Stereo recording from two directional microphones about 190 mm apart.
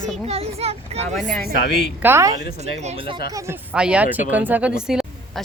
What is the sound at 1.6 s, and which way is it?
Speech, 60° left (ahead or behind).